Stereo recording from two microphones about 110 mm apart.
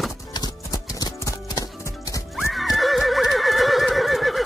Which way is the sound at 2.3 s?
Centre (ahead or behind).